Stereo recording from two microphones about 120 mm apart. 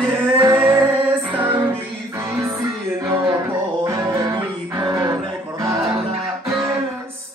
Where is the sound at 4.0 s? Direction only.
25° right (ahead or behind).